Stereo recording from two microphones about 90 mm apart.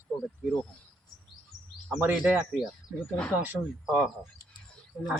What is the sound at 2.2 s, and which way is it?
Speech, 10° right (ahead or behind).